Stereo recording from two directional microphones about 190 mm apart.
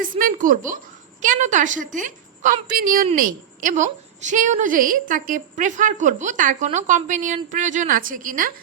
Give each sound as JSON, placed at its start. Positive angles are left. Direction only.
{"t": 0.0, "sound": "a woman's voice", "side_deg": -45}
{"t": 2.6, "sound": "a woman's voice", "side_deg": -50}